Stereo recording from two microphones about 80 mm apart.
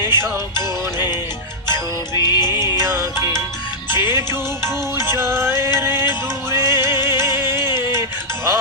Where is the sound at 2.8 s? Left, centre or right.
Right.